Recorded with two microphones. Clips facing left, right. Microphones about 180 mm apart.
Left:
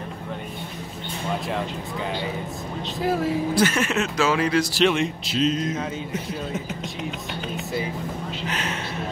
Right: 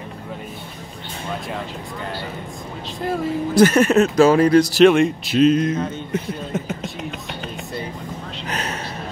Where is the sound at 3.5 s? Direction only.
40° right (ahead or behind).